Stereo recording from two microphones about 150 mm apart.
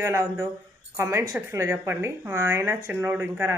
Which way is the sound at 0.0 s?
20° right (ahead or behind).